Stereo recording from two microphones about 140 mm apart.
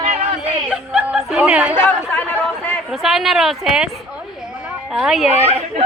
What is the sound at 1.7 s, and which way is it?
Speech, 15° left (ahead or behind).